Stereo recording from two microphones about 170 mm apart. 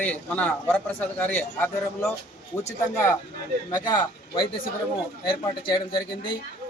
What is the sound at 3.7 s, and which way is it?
A man's voice, 25° left (ahead or behind).